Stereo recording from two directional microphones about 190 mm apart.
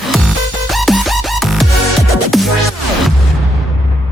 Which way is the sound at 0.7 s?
Centre (ahead or behind).